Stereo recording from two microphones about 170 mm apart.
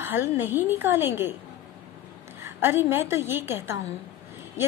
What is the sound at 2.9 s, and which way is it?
Speech, 15° right (ahead or behind).